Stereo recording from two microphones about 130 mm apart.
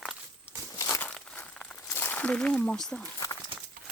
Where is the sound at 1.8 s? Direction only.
15° left (ahead or behind).